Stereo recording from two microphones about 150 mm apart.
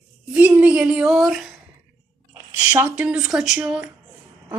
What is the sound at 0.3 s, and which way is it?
A woman's voice, 10° right (ahead or behind).